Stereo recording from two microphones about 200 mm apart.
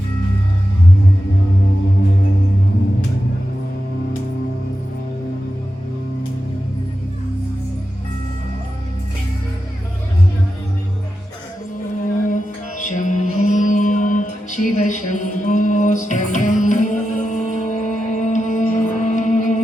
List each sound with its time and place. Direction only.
12.3 s music: 40° left (ahead or behind)